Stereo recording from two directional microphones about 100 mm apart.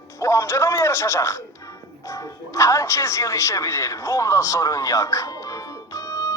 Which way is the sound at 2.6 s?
30° left (ahead or behind).